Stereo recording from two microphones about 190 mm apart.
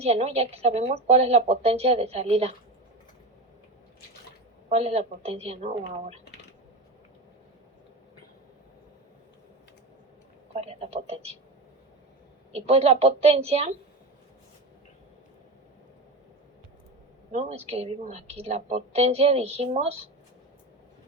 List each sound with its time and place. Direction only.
0.0 s a woman's voice: 35° right (ahead or behind)
4.7 s a woman's voice: 35° right (ahead or behind)
10.5 s a woman's voice: 35° right (ahead or behind)
12.5 s a woman's voice: 35° right (ahead or behind)
17.3 s a woman's voice: 35° right (ahead or behind)